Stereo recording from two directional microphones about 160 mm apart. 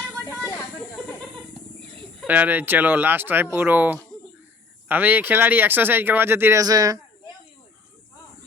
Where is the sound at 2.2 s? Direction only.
10° right (ahead or behind).